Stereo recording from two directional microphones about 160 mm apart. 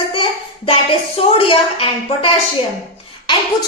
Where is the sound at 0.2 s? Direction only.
35° left (ahead or behind).